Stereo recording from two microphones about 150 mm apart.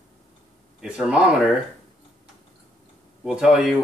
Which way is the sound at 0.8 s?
5° right (ahead or behind).